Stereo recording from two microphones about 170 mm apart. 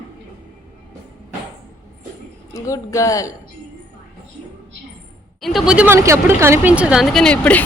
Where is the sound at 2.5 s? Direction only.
20° left (ahead or behind).